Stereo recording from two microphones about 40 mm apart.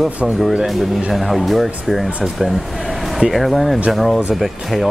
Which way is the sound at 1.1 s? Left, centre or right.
Centre.